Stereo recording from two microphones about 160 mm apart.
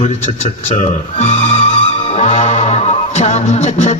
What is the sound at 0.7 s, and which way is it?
Speech, 50° left (ahead or behind).